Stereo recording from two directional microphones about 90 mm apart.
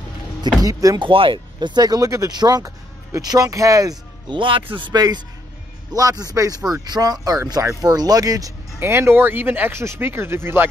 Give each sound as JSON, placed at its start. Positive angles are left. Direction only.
{"t": 0.6, "sound": "speech", "side_deg": -40}
{"t": 0.9, "sound": "speech", "side_deg": -75}
{"t": 4.3, "sound": "a man's voice", "side_deg": -70}
{"t": 5.9, "sound": "speech", "side_deg": -40}
{"t": 8.8, "sound": "speech", "side_deg": -30}